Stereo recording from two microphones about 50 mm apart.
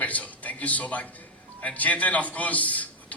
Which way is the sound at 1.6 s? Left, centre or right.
Left.